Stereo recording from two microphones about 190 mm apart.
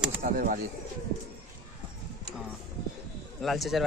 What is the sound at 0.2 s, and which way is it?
Speech, 45° right (ahead or behind).